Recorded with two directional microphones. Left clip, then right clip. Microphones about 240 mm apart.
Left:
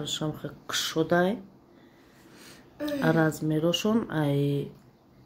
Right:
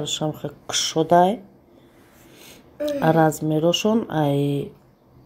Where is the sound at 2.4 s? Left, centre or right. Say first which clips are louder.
Right 8 dB; centre.